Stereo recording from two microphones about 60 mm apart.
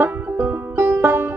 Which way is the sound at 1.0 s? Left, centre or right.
Right.